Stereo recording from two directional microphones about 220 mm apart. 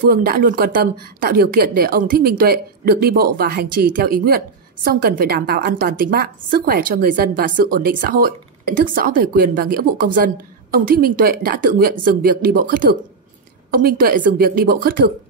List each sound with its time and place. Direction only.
0.0 s a woman's voice: 40° right (ahead or behind)